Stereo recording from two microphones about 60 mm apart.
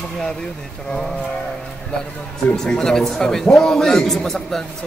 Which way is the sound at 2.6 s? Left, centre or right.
Centre.